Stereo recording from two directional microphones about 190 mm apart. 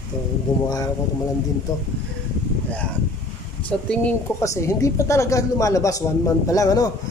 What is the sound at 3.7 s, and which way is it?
A man's voice, 5° left (ahead or behind).